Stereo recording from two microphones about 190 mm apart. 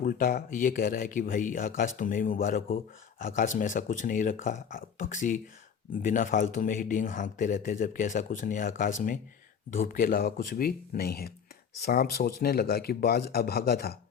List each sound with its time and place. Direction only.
0.0 s speech: 45° left (ahead or behind)